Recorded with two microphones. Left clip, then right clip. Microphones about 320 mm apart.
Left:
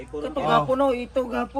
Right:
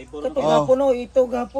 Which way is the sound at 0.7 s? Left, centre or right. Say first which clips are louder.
Right 5 dB; right.